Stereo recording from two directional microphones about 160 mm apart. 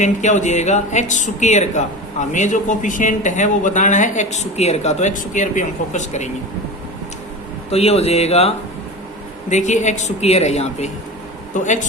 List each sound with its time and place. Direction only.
0.0 s speech: 50° left (ahead or behind)
7.7 s speech: 40° left (ahead or behind)